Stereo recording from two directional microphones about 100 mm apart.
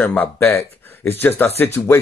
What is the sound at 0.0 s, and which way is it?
A man's voice, 20° left (ahead or behind).